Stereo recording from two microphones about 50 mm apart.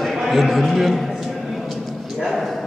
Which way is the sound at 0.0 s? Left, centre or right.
Centre.